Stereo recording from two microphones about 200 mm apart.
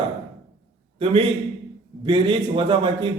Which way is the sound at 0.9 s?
30° right (ahead or behind).